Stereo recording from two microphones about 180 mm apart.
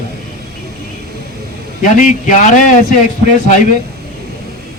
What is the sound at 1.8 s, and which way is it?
Speech, 45° left (ahead or behind).